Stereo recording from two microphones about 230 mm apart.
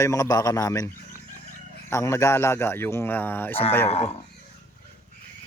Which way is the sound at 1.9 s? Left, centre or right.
Centre.